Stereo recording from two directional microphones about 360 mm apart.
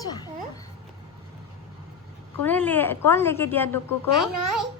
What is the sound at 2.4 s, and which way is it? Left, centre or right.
A woman's voice, centre.